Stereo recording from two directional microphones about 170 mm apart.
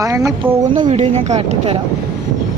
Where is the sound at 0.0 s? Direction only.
20° right (ahead or behind).